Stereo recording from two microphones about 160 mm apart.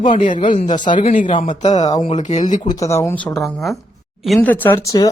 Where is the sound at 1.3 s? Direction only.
35° left (ahead or behind); by 2.7 s 50° left (ahead or behind).